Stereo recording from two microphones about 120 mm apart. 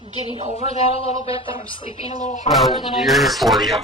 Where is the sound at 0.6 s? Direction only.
60° left (ahead or behind).